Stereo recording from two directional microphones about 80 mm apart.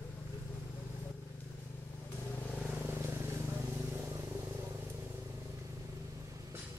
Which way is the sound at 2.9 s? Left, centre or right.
Right.